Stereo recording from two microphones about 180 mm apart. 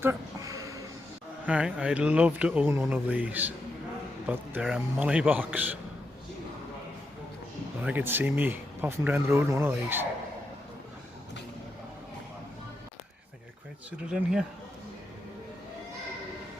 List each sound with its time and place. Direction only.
0.0 s a sound: 15° right (ahead or behind)
1.5 s speech: 5° right (ahead or behind)
4.6 s speech: 5° right (ahead or behind)
7.8 s speech: 10° right (ahead or behind)
14.1 s speech: 5° right (ahead or behind)